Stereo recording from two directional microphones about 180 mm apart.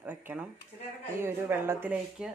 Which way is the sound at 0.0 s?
10° right (ahead or behind).